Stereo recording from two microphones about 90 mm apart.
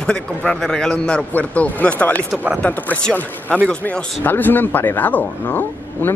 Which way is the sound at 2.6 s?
15° left (ahead or behind).